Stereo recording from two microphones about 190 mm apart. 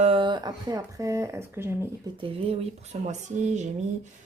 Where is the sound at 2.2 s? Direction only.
30° right (ahead or behind).